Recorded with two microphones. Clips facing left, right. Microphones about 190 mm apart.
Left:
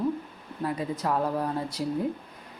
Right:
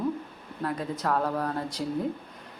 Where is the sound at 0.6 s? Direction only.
10° left (ahead or behind).